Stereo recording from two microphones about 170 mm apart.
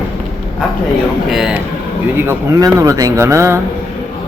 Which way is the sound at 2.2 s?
20° right (ahead or behind).